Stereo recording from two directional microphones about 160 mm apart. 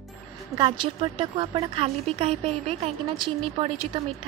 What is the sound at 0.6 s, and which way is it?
Speech, 30° right (ahead or behind).